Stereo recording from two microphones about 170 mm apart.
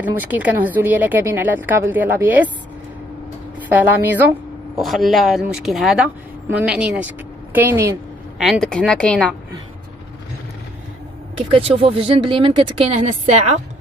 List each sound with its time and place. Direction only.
0.0 s a woman's voice: 10° right (ahead or behind)
3.6 s a woman's voice: 10° right (ahead or behind)
4.7 s a woman's voice: centre (ahead or behind)
8.4 s speech: centre (ahead or behind)
11.5 s speech: 35° right (ahead or behind)